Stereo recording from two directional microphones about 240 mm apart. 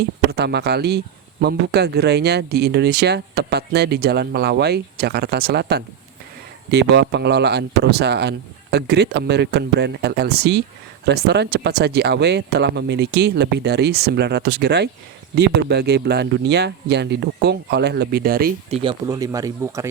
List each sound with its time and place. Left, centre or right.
0.3 s speech: right
18.7 s speech: right